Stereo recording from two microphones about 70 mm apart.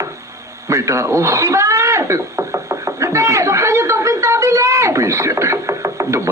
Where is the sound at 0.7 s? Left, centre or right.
Right.